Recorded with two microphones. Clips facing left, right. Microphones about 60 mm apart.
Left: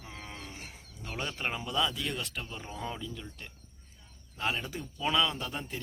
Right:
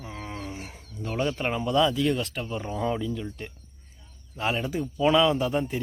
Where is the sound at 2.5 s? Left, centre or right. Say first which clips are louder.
Right 10 dB; right.